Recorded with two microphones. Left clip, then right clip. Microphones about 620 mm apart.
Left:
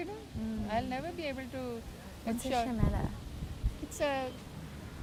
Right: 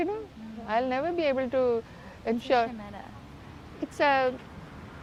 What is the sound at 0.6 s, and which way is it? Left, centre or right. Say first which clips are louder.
A woman's voice: right 9 dB; right.